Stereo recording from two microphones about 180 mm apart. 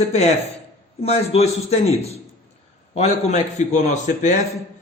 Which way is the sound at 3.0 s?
40° left (ahead or behind).